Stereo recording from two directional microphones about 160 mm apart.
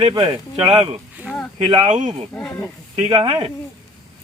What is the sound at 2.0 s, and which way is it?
Speech, 45° right (ahead or behind).